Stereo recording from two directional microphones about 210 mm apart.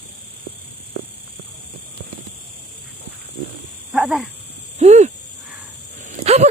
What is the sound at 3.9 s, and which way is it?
Dog, 5° right (ahead or behind).